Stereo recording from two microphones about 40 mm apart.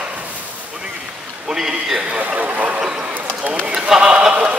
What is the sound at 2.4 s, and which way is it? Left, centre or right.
Speech, right.